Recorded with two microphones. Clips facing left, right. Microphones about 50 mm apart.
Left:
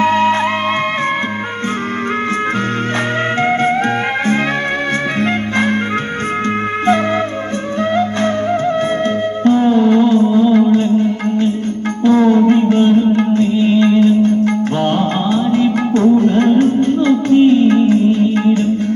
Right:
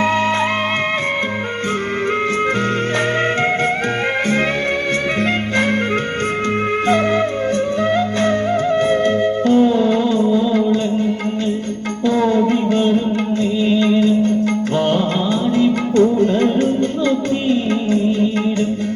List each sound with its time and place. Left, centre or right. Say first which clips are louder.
0.0 s music: left 4 dB; left
9.4 s music: left 4 dB; left
12.0 s music: left 5 dB; left
15.6 s music: even; left
16.2 s music: left 4 dB; left